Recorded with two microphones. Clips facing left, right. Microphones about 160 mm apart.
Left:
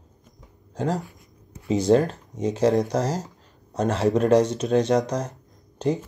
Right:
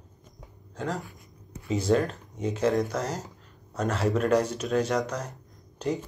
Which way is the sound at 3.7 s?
30° left (ahead or behind).